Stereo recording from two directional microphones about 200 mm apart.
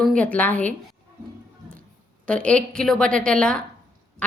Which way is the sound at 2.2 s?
5° left (ahead or behind).